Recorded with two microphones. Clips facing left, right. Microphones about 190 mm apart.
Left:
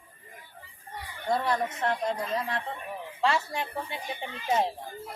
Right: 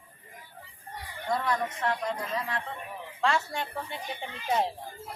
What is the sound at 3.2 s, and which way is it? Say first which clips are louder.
Speech: left 1 dB; 5° left (ahead or behind).